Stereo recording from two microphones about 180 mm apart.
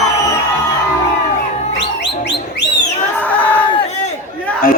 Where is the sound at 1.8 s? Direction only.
70° left (ahead or behind).